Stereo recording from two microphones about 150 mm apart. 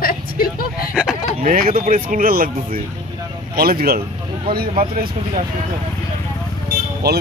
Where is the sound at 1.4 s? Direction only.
70° right (ahead or behind).